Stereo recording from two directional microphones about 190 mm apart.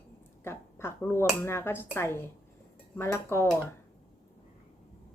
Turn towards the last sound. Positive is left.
turn(degrees=10)  # may be behind; listen again after turning